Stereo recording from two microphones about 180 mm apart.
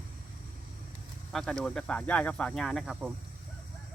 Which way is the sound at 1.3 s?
5° left (ahead or behind).